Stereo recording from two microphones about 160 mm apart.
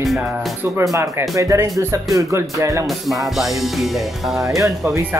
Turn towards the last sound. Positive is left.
turn(degrees=-15)  # may be behind; listen again after turning